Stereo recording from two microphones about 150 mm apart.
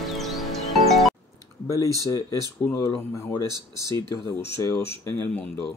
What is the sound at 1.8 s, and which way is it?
Speech, 25° right (ahead or behind).